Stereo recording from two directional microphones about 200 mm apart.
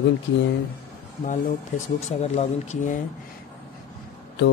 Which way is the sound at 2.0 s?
35° left (ahead or behind).